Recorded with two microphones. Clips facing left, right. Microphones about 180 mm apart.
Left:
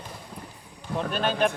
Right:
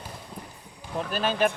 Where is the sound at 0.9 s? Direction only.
5° right (ahead or behind).